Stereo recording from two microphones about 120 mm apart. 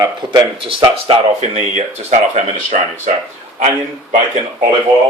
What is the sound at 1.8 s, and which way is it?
Speech, 80° right.